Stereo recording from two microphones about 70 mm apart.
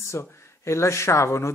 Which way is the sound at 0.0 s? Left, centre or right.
Left.